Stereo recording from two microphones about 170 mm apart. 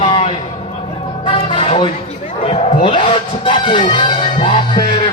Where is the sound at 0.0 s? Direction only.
30° left (ahead or behind).